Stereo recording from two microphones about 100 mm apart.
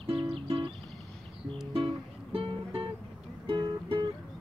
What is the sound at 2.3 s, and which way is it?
Music, 65° right (ahead or behind).